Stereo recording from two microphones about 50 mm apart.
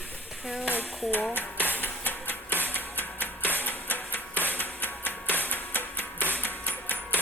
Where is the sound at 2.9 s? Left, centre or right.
Left.